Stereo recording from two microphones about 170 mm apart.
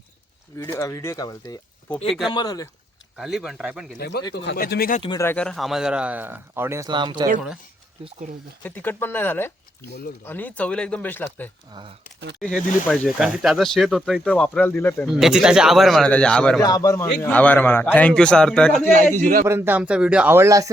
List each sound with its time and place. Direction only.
0.5 s speech: 15° left (ahead or behind)
2.0 s speech: centre (ahead or behind)
2.3 s speech: 20° left (ahead or behind)
3.2 s speech: centre (ahead or behind)
3.9 s speech: 65° left (ahead or behind)
5.0 s speech: 15° left (ahead or behind); by 7.3 s 30° right (ahead or behind)
8.6 s a man's voice: 10° left (ahead or behind)
11.7 s speech: 30° right (ahead or behind)
12.9 s speech: 5° right (ahead or behind); by 15.0 s 10° left (ahead or behind)
15.0 s speech: 5° right (ahead or behind)
16.6 s a man's voice: 20° left (ahead or behind); by 18.9 s 5° left (ahead or behind)
19.1 s a man's voice: 55° right (ahead or behind)
19.5 s speech: 15° right (ahead or behind)